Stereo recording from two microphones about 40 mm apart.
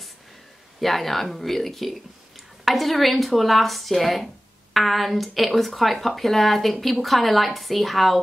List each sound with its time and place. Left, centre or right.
0.7 s speech: centre